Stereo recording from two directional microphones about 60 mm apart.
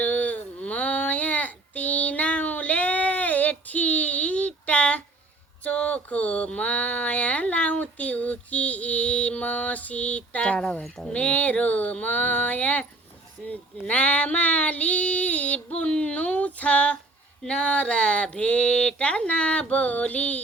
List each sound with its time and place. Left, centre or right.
0.0 s child singing: left
5.6 s a sound: centre
10.8 s speech: centre
11.1 s speech: left
13.4 s female singing: left
17.4 s speech: centre